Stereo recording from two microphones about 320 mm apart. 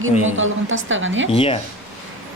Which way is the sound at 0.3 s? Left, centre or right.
Right.